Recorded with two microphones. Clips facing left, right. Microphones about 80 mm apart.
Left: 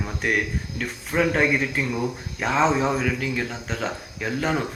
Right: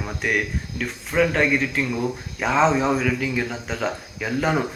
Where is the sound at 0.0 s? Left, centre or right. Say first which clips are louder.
Even; centre.